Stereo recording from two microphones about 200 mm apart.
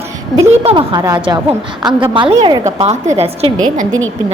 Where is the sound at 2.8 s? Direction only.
35° right (ahead or behind).